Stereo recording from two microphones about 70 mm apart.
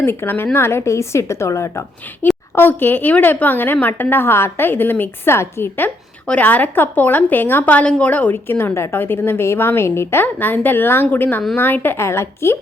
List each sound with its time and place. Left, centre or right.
0.0 s a woman's voice: left
2.6 s a woman's voice: left